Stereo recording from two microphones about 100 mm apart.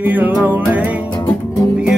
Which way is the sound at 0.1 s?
15° right (ahead or behind).